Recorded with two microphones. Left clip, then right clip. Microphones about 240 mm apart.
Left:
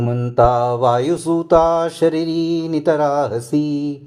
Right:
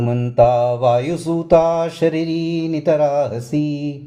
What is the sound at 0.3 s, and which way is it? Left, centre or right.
Mantra, left.